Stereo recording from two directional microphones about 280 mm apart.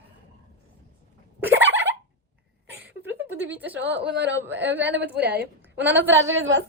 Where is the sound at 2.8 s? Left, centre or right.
Centre.